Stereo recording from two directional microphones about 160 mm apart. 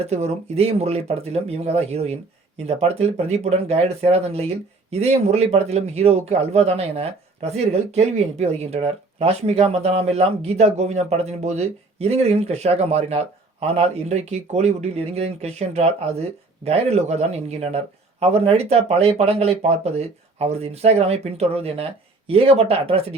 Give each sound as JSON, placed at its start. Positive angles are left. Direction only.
{"t": 0.0, "sound": "speech", "side_deg": -40}